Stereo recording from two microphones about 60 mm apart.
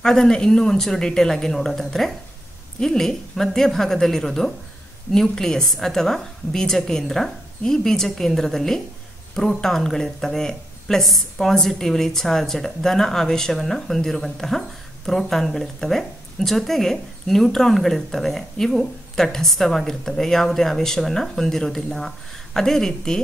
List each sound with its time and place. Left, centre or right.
0.0 s a woman's voice: centre